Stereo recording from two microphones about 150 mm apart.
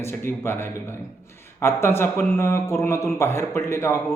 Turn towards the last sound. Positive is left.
turn(degrees=15)  # may be behind; listen again after turning